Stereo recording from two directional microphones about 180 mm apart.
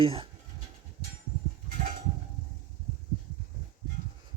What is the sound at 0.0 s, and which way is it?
Speech, 30° right (ahead or behind).